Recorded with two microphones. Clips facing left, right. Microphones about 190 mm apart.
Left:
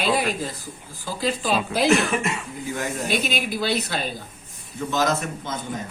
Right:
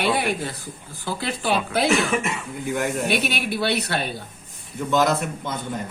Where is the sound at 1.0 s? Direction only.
65° right (ahead or behind).